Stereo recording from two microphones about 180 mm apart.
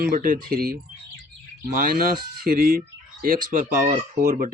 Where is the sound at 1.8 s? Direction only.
55° right (ahead or behind).